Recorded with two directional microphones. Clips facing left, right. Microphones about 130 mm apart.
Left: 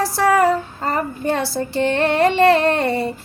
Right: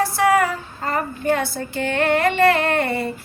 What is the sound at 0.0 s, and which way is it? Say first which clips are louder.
Female singing: left 1 dB; 35° left (ahead or behind).